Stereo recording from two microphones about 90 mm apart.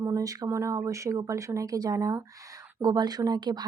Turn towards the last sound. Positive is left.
turn(degrees=-50)  # may be behind; listen again after turning